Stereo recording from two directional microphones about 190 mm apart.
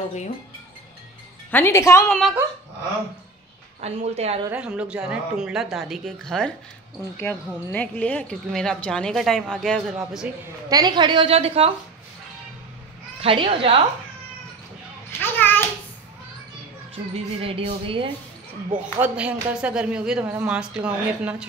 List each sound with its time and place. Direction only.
1.5 s a woman's voice: 10° left (ahead or behind)
2.0 s a woman's voice: centre (ahead or behind)
3.8 s speech: 35° right (ahead or behind)
4.5 s a woman's voice: 5° right (ahead or behind)
10.7 s a woman's voice: 20° right (ahead or behind)
13.2 s a woman's voice: 30° right (ahead or behind)
15.1 s a child's voice: 10° left (ahead or behind)
17.1 s a woman's voice: 30° right (ahead or behind)
18.9 s speech: 10° right (ahead or behind)